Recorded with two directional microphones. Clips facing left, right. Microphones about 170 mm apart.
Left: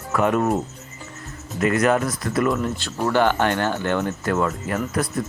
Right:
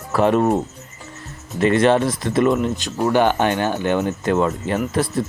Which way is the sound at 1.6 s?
30° right (ahead or behind).